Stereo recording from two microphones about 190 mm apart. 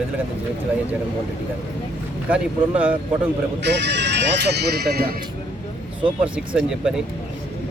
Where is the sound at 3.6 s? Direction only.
70° right (ahead or behind).